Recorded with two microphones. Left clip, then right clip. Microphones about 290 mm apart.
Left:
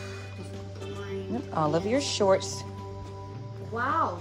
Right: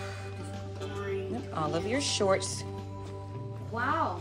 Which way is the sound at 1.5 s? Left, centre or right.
Centre.